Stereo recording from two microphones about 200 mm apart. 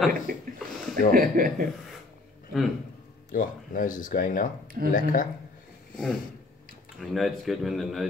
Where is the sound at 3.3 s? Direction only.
40° left (ahead or behind).